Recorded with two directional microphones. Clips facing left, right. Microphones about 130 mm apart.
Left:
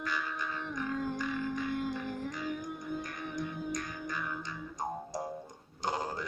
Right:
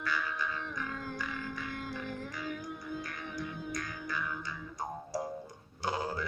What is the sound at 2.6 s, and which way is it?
Music, 20° left (ahead or behind).